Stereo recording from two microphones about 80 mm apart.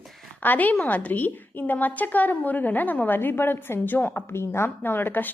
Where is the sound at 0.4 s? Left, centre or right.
Left.